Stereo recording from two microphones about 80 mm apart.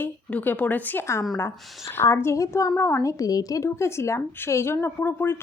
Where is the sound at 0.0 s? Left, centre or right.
Left.